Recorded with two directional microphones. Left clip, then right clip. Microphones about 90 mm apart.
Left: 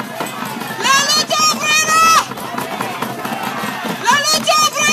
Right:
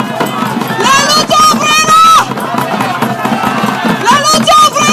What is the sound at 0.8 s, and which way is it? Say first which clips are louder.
Run: right 5 dB; 20° left (ahead or behind).